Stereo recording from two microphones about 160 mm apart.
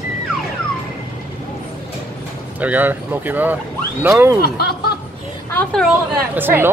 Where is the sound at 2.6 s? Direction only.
10° right (ahead or behind).